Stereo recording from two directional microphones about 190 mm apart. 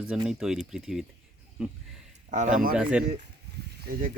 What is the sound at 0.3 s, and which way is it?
Speech, 5° right (ahead or behind).